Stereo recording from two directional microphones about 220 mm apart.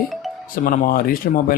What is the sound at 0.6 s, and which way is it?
Speech, 40° left (ahead or behind).